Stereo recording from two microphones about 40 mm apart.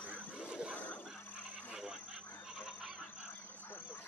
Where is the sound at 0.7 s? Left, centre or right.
Left.